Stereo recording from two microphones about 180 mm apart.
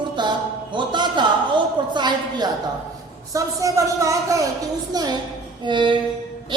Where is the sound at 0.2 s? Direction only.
25° right (ahead or behind).